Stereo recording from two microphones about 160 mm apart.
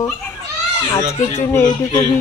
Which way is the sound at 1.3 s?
15° left (ahead or behind).